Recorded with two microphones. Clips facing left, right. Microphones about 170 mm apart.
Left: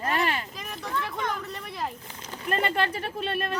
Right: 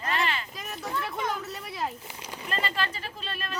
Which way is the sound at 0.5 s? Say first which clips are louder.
Even; centre (ahead or behind).